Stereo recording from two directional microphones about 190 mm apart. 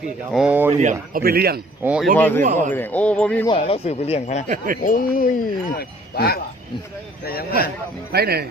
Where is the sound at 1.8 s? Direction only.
10° right (ahead or behind).